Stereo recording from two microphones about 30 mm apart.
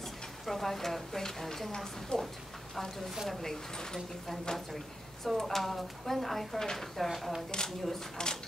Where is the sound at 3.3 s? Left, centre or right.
Centre.